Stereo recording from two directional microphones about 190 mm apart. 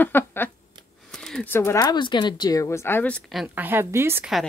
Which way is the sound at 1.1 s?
5° left (ahead or behind).